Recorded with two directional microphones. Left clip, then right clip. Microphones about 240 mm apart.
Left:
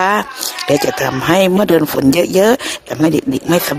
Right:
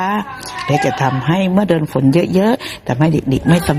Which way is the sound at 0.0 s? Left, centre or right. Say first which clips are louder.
Left 5 dB; left.